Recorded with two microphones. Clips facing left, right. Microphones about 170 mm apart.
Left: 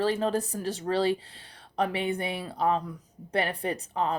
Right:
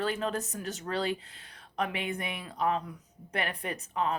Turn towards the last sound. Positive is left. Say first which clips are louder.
# left 3 dB
turn(degrees=35)  # may be behind; listen again after turning